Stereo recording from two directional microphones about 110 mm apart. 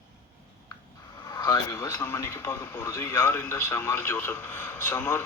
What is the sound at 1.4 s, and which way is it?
Speech, 35° left (ahead or behind).